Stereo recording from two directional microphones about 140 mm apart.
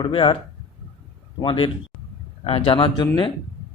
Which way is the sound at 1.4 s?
40° left (ahead or behind).